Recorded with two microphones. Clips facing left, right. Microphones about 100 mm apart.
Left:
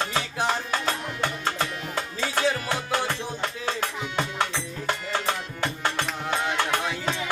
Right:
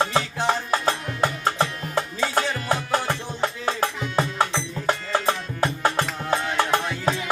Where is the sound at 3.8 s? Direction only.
35° right (ahead or behind).